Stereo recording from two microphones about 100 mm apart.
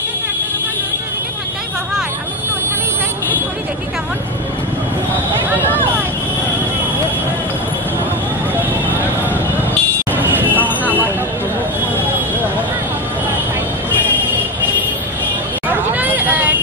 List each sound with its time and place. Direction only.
10.1 s vehicle: 20° right (ahead or behind)
15.7 s vehicle: 15° right (ahead or behind)